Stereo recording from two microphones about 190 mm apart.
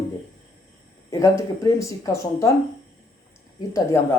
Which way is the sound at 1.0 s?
15° left (ahead or behind).